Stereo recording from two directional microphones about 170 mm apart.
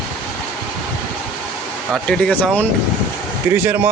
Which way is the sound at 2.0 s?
5° left (ahead or behind).